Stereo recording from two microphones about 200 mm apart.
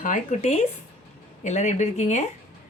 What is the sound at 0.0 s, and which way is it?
Speech, 40° left (ahead or behind).